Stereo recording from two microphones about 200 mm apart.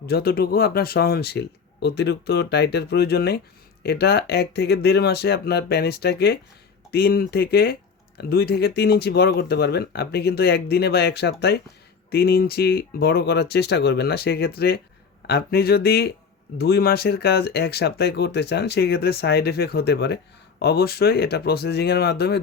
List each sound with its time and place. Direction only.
0.0 s speech: 50° left (ahead or behind)